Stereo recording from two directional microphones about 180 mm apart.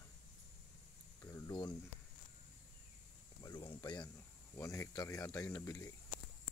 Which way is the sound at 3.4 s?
20° left (ahead or behind).